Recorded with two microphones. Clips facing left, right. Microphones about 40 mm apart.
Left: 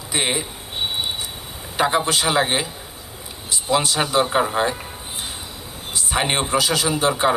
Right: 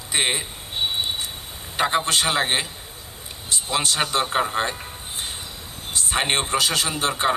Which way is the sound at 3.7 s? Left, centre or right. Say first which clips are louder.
Left 4 dB; right.